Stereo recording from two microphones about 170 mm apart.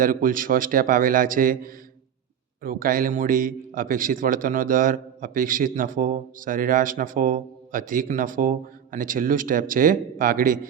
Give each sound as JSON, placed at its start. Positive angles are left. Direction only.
{"t": 0.0, "sound": "a man's voice", "side_deg": -55}